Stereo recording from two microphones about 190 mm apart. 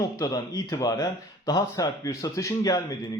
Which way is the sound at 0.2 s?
20° left (ahead or behind).